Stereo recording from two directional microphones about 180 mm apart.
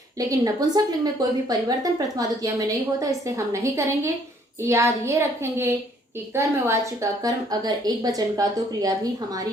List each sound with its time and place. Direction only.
0.2 s a child's voice: 20° right (ahead or behind)